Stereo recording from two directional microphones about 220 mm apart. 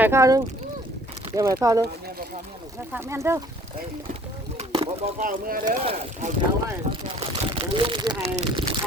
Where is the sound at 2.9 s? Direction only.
10° right (ahead or behind).